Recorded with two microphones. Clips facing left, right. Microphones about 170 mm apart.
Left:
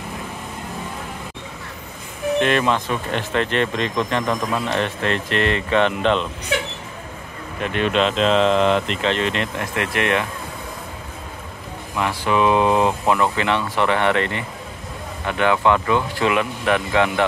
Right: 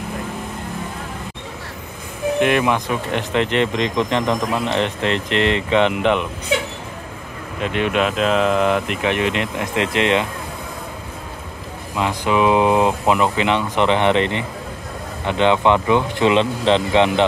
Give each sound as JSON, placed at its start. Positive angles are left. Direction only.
{"t": 2.4, "sound": "speech", "side_deg": -15}
{"t": 7.6, "sound": "speech", "side_deg": -15}
{"t": 11.9, "sound": "speech", "side_deg": -15}